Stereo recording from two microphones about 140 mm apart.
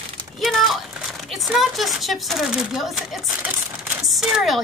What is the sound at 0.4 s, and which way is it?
Crumpling, centre (ahead or behind).